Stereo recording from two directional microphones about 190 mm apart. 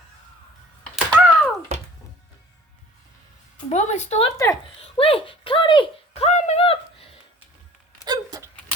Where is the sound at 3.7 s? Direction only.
35° left (ahead or behind).